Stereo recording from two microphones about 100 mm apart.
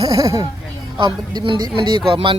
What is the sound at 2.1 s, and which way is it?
Speech, 60° right (ahead or behind).